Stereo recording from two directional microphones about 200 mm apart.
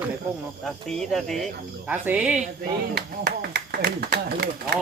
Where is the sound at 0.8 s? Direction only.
Centre (ahead or behind).